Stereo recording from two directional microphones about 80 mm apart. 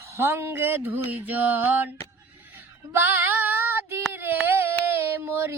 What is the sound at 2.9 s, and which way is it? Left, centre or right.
Female singing, right.